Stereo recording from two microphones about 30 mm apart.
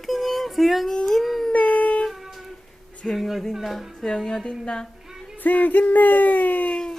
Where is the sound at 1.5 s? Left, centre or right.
Left.